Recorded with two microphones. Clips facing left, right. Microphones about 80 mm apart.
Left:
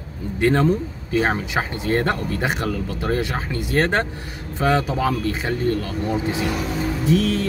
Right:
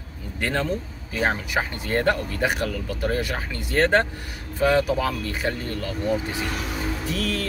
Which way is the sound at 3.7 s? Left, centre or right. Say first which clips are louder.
Right 1 dB; centre.